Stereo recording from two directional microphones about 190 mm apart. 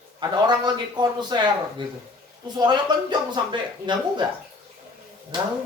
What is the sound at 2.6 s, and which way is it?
A woman's voice, 25° right (ahead or behind).